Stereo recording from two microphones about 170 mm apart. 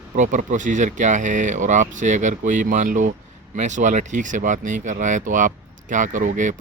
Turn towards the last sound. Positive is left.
turn(degrees=-50)  # may be behind; listen again after turning